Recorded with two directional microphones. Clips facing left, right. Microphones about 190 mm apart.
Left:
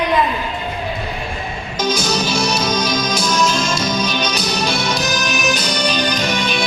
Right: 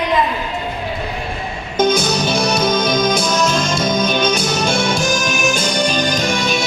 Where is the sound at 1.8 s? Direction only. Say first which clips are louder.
Right 4 dB; 55° right (ahead or behind).